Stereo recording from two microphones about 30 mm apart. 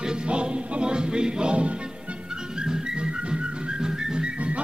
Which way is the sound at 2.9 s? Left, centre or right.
Right.